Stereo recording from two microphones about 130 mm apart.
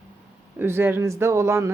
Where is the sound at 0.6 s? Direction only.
15° right (ahead or behind).